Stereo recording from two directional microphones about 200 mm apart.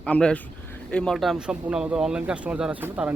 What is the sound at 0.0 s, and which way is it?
A man's voice, 5° left (ahead or behind).